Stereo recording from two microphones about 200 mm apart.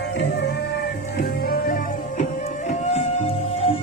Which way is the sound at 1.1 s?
50° left (ahead or behind).